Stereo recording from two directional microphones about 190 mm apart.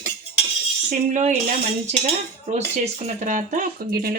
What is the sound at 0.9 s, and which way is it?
Speech, 40° right (ahead or behind).